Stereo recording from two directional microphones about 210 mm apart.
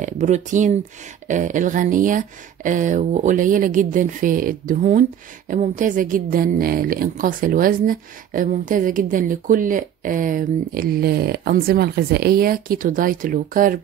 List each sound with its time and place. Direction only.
0.0 s a woman's voice: 35° right (ahead or behind)